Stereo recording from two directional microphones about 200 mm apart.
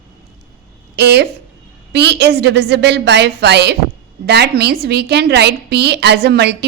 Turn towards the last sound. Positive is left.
turn(degrees=-55)  # may be behind; listen again after turning